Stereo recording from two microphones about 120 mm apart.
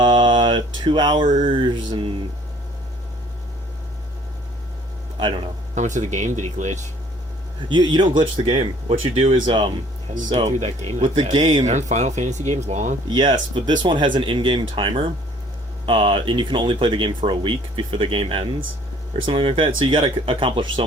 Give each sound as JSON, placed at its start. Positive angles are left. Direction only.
{"t": 0.0, "sound": "mantra", "side_deg": -40}
{"t": 1.5, "sound": "speech", "side_deg": -45}
{"t": 5.2, "sound": "speech", "side_deg": -45}
{"t": 5.7, "sound": "speech", "side_deg": -90}
{"t": 7.7, "sound": "speech", "side_deg": -40}
{"t": 10.3, "sound": "speech", "side_deg": -65}
{"t": 11.2, "sound": "speech", "side_deg": -45}
{"t": 11.6, "sound": "speech", "side_deg": -80}
{"t": 13.1, "sound": "speech", "side_deg": -40}